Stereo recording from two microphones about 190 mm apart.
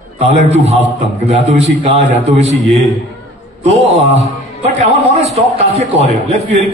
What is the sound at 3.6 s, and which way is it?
A man's voice, 35° right (ahead or behind).